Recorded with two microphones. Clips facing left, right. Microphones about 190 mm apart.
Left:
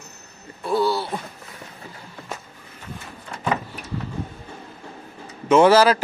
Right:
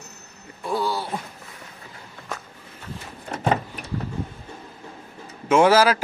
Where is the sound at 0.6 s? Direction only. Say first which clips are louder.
Left 4 dB; 15° right (ahead or behind).